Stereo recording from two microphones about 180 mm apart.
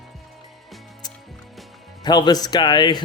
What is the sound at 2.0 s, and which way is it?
Speech, 25° left (ahead or behind).